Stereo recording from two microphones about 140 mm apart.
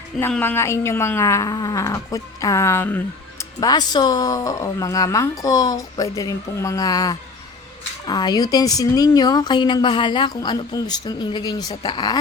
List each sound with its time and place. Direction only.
0.2 s speech: 15° left (ahead or behind)
3.6 s speech: 30° left (ahead or behind)